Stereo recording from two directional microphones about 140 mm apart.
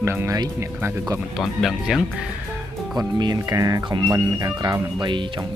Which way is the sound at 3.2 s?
30° right (ahead or behind).